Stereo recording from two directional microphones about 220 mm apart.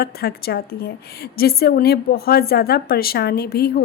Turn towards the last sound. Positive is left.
turn(degrees=45)  # may be behind; listen again after turning